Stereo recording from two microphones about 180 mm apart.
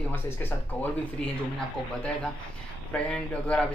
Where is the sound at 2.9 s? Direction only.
5° left (ahead or behind).